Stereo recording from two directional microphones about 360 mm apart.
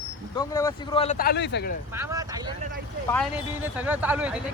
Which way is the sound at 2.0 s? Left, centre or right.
Centre.